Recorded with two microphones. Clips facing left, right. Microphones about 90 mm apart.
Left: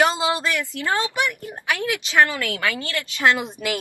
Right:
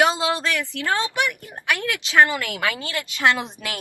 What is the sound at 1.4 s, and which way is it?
Speech, 20° left (ahead or behind).